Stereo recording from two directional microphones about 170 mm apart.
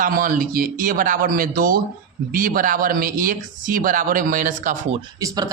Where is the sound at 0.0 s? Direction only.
55° right (ahead or behind).